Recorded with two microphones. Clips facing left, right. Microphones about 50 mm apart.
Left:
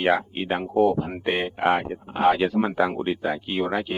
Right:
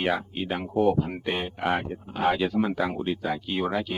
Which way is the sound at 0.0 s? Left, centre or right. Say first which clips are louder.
Left 5 dB; left.